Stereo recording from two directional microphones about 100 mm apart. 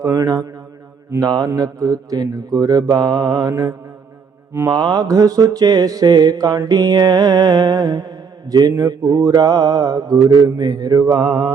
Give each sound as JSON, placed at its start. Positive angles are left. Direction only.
{"t": 0.0, "sound": "mantra", "side_deg": -35}
{"t": 4.7, "sound": "mantra", "side_deg": -45}